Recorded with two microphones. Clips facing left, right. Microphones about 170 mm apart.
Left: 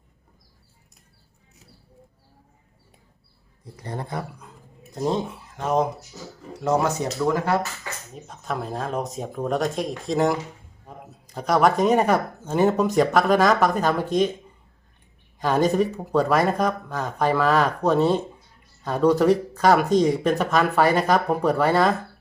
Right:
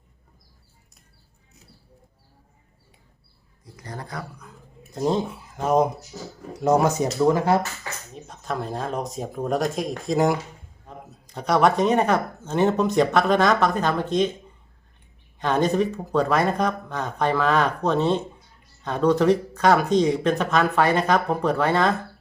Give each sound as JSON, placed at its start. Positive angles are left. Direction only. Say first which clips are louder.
{"t": 3.8, "sound": "speech", "louder": "left 4 dB", "side_deg": 25}
{"t": 4.9, "sound": "speech", "louder": "right 1 dB", "side_deg": 0}
{"t": 8.1, "sound": "speech", "louder": "even", "side_deg": 5}
{"t": 15.4, "sound": "speech", "louder": "left 1 dB", "side_deg": 5}